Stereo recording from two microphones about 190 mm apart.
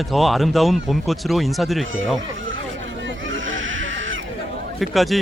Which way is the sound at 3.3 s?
90° right.